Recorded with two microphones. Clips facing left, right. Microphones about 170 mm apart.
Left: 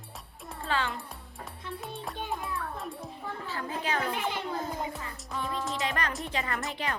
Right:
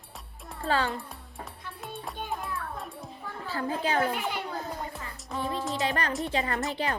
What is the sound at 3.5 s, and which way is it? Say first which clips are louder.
Speech: right 5 dB; 35° right (ahead or behind).